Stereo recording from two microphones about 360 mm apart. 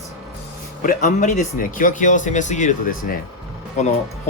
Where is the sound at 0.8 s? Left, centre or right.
Left.